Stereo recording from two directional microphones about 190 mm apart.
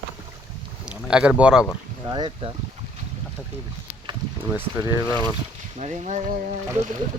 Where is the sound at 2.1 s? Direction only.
25° right (ahead or behind).